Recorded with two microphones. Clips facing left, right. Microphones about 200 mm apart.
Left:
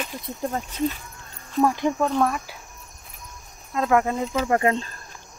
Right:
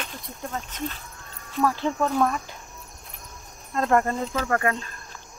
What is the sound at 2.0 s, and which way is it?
Speech, 5° left (ahead or behind).